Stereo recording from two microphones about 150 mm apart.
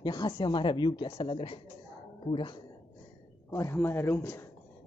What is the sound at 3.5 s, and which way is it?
Speech, 20° left (ahead or behind).